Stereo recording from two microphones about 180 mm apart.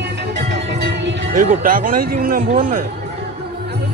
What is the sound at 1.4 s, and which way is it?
Speech, 50° right (ahead or behind).